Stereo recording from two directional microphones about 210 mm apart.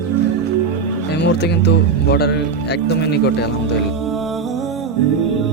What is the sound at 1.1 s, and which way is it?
Speech, 50° left (ahead or behind).